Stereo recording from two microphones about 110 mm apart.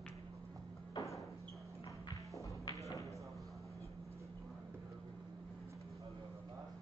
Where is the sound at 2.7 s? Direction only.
30° left (ahead or behind).